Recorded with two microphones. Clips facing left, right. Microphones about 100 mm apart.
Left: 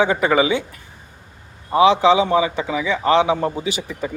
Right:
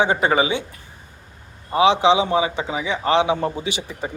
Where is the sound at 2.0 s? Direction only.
45° left (ahead or behind).